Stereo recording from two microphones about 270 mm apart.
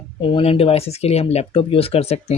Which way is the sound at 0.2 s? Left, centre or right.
Centre.